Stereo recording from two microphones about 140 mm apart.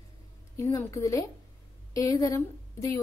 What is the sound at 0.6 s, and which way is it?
A woman's voice, 25° left (ahead or behind).